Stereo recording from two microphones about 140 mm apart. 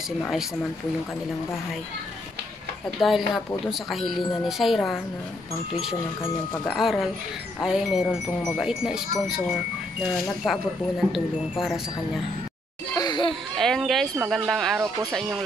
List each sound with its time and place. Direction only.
3.0 s speech: centre (ahead or behind)
6.7 s speech: centre (ahead or behind)
10.1 s speech: centre (ahead or behind)
12.9 s children playing: 30° left (ahead or behind)
13.6 s speech: 5° left (ahead or behind)